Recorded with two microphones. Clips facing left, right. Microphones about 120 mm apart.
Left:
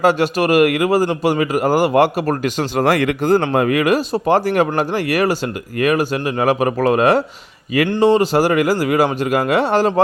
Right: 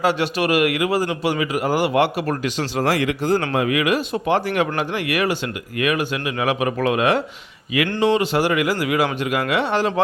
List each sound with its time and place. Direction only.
0.0 s speech: 45° left (ahead or behind)